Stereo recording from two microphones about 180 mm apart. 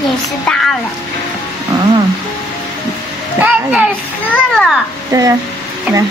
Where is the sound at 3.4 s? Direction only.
10° right (ahead or behind).